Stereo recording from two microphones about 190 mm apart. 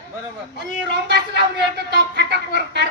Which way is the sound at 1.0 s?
60° right (ahead or behind).